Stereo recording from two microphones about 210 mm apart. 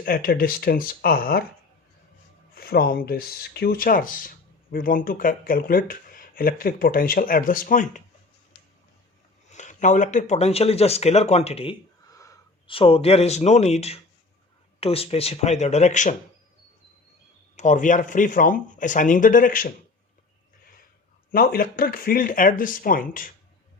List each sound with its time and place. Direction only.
0.0 s speech: 45° left (ahead or behind)
2.6 s speech: 45° left (ahead or behind)
9.5 s speech: 35° left (ahead or behind)
12.1 s speech: 15° left (ahead or behind); by 16.1 s 35° left (ahead or behind)
17.6 s speech: 35° left (ahead or behind)
21.3 s speech: 45° left (ahead or behind)